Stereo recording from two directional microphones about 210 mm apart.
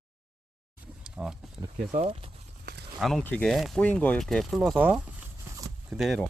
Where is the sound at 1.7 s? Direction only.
30° right (ahead or behind).